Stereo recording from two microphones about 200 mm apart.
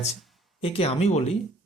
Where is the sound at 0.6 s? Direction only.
30° left (ahead or behind).